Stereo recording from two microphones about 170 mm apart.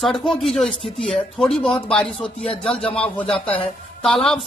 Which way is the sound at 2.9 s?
35° left (ahead or behind).